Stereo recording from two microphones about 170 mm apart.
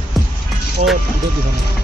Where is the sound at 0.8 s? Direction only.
50° right (ahead or behind).